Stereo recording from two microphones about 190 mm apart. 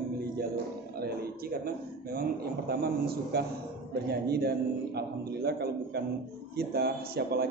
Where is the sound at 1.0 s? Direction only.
55° right (ahead or behind).